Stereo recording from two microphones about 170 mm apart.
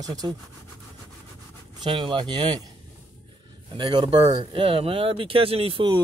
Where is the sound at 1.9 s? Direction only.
30° right (ahead or behind).